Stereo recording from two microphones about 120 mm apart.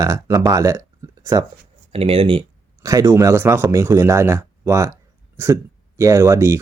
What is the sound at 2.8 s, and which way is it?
Speech, 25° right (ahead or behind).